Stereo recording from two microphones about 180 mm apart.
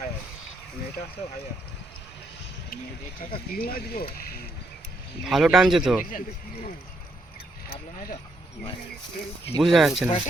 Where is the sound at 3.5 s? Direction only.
55° left (ahead or behind).